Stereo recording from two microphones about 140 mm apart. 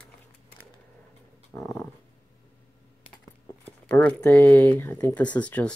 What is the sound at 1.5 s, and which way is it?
Speech, 15° left (ahead or behind).